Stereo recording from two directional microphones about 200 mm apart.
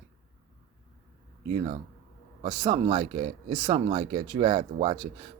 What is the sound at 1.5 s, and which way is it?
Speech, 30° right (ahead or behind).